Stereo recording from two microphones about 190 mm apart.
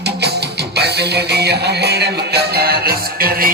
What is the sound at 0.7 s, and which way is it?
Music, 60° right (ahead or behind).